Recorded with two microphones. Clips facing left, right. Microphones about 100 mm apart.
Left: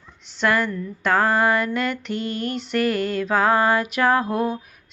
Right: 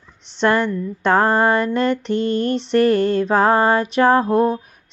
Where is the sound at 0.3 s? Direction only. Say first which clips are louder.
Right 4 dB; 30° right (ahead or behind).